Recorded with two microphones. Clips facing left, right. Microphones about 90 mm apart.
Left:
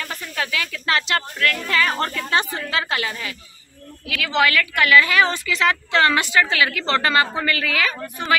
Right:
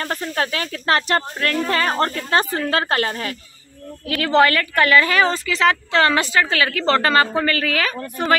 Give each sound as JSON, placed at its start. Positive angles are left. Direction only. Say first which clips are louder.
{"t": 0.0, "sound": "speech", "louder": "right 5 dB", "side_deg": -45}